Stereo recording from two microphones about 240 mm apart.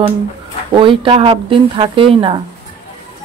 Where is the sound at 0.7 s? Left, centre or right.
Right.